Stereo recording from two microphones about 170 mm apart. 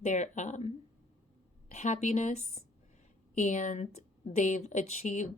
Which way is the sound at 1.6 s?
45° left (ahead or behind).